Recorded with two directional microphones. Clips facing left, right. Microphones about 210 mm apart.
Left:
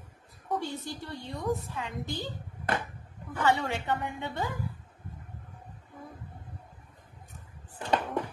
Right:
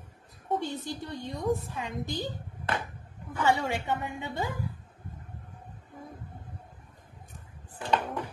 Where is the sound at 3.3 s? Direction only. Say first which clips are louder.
Right 1 dB; 10° right (ahead or behind).